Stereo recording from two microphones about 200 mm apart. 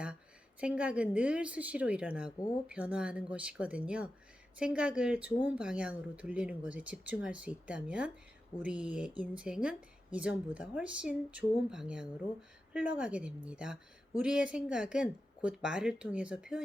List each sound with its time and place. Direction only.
0.6 s speech: 5° right (ahead or behind)